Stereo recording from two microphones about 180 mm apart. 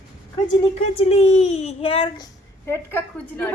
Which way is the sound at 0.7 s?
35° left (ahead or behind).